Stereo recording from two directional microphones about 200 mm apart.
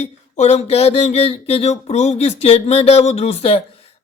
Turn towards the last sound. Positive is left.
turn(degrees=30)  # may be behind; listen again after turning